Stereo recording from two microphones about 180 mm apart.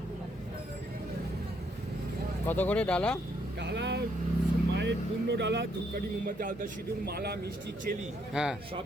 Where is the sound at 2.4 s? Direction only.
10° left (ahead or behind).